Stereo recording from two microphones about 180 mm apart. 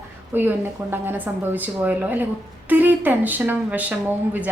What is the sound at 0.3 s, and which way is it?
A woman's voice, 10° right (ahead or behind).